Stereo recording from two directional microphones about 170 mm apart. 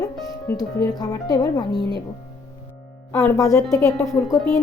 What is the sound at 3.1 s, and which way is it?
Speech, 10° left (ahead or behind).